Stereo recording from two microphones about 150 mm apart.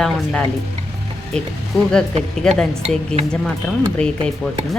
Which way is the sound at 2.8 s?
45° right (ahead or behind).